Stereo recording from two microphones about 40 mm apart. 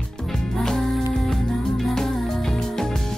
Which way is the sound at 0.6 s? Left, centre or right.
Centre.